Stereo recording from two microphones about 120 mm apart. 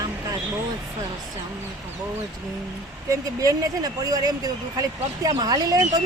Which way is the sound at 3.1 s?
30° right (ahead or behind).